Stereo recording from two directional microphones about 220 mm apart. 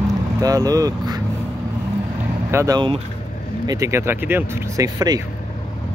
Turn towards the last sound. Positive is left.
turn(degrees=-15)  # may be behind; listen again after turning